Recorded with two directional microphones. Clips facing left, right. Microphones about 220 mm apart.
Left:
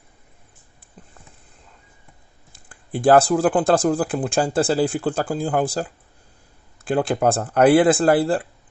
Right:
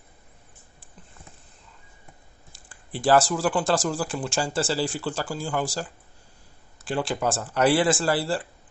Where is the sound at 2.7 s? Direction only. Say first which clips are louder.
Left 5 dB; 55° left (ahead or behind).